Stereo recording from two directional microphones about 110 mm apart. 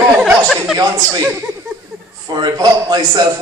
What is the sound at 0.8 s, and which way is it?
Speech, 35° right (ahead or behind).